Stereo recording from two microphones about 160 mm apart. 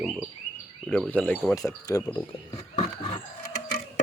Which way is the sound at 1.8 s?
25° left (ahead or behind).